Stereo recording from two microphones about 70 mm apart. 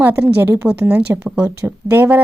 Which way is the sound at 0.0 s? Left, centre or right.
Right.